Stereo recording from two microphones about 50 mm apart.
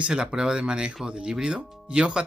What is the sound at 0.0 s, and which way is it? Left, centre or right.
Speech, centre.